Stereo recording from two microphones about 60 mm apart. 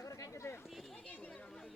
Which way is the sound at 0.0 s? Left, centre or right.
Left.